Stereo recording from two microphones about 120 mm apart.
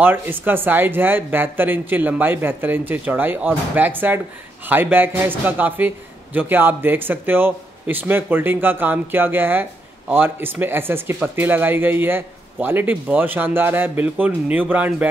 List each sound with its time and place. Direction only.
0.0 s a man's voice: 15° right (ahead or behind)